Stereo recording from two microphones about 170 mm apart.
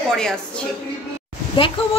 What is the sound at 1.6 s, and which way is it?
Speech, 30° left (ahead or behind).